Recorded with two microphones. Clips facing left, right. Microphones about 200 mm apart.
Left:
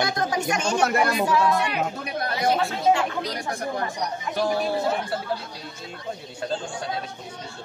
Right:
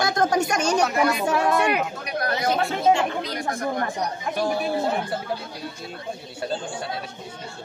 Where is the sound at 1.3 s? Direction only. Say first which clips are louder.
Right 1 dB; 55° right (ahead or behind).